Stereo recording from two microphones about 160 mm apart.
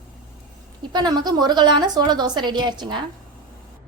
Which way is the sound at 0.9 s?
25° right (ahead or behind).